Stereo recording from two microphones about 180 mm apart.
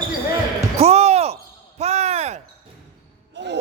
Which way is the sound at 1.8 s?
35° right (ahead or behind).